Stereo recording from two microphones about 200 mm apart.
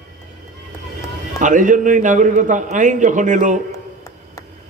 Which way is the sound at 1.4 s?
40° right (ahead or behind).